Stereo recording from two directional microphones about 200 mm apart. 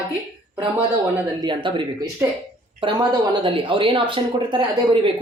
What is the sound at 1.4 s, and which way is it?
Speech, 25° right (ahead or behind).